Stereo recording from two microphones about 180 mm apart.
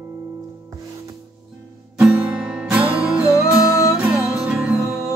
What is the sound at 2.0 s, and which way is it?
Music, 5° right (ahead or behind).